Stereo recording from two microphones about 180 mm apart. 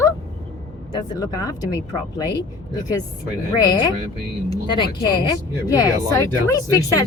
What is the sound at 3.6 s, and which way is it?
Speech, 25° left (ahead or behind).